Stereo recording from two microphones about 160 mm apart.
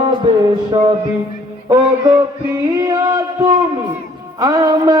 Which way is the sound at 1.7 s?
20° right (ahead or behind).